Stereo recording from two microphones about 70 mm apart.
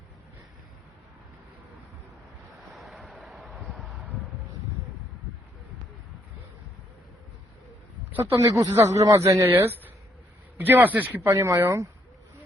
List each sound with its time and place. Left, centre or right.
2.7 s a sound: centre
8.2 s speech: right
10.6 s a man's voice: right
11.3 s speech: right